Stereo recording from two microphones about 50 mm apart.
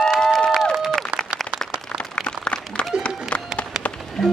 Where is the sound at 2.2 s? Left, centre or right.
Centre.